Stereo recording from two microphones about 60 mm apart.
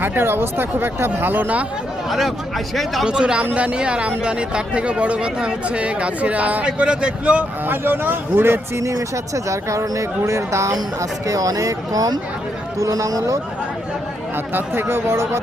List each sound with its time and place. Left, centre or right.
0.0 s speech: right
2.0 s speech: centre
3.1 s a man's voice: centre
7.7 s speech: right
8.7 s speech: right
11.3 s a man's voice: right
14.5 s speech: right